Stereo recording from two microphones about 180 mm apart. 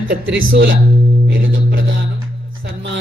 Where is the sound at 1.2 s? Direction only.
85° right.